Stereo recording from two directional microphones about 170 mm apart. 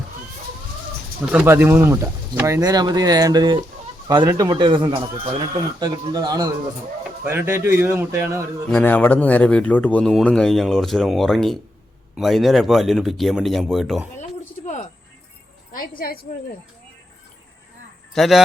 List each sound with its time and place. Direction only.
1.2 s a man's voice: 10° right (ahead or behind)
8.7 s speech: 10° left (ahead or behind)
15.7 s a woman's voice: 55° left (ahead or behind)
18.1 s speech: centre (ahead or behind)